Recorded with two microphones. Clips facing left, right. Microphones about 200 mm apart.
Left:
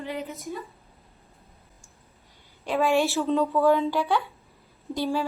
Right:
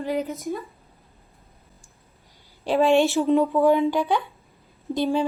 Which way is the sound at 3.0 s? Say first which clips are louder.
Right 4 dB; 15° right (ahead or behind).